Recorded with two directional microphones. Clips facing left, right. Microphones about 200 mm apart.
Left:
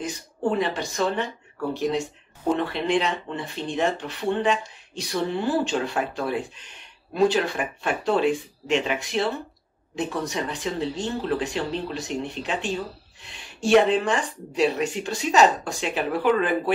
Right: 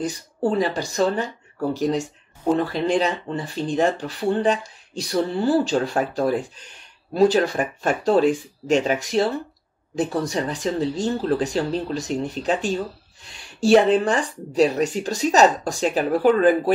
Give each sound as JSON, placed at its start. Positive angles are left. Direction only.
{"t": 0.0, "sound": "speech", "side_deg": -35}